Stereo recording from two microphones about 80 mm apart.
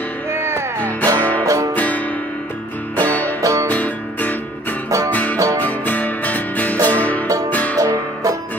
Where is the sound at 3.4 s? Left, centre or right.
Right.